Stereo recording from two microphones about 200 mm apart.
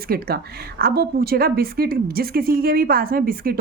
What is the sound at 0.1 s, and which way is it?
A woman's voice, 50° right (ahead or behind).